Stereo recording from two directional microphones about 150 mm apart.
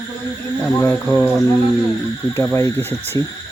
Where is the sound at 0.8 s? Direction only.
15° left (ahead or behind).